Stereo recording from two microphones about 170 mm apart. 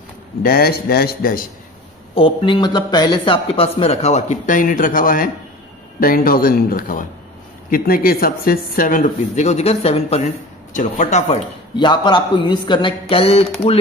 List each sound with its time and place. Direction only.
0.4 s a man's voice: 60° left (ahead or behind)
2.1 s a man's voice: 30° left (ahead or behind)
10.7 s speech: 50° left (ahead or behind)
11.7 s a man's voice: 25° left (ahead or behind)